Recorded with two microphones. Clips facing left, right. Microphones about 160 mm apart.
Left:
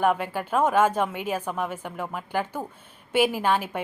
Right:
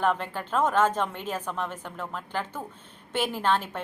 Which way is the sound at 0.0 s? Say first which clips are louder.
Left 3 dB; 10° left (ahead or behind).